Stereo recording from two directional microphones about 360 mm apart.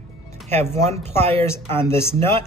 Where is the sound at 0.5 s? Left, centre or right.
Centre.